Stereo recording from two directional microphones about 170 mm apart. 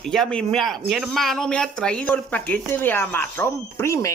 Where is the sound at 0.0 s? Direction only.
5° left (ahead or behind).